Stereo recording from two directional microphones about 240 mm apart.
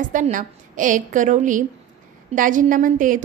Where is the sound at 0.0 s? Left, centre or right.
Right.